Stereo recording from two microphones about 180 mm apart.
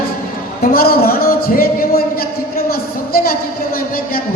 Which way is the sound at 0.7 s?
55° left (ahead or behind).